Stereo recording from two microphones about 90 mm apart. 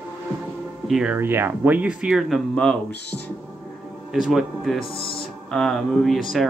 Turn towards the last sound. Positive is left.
turn(degrees=0)  # may be behind; listen again after turning